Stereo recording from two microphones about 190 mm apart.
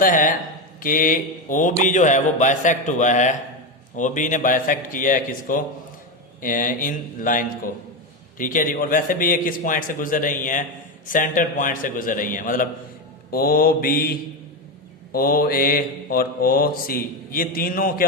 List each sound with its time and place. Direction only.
0.0 s mantra: 45° left (ahead or behind)
0.8 s speech: 45° left (ahead or behind)
3.9 s mantra: 40° left (ahead or behind)